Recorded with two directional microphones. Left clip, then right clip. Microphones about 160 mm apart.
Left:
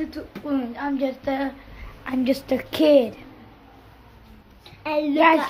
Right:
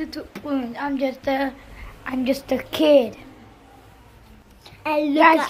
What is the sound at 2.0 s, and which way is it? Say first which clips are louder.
A woman's voice: even; 15° left (ahead or behind).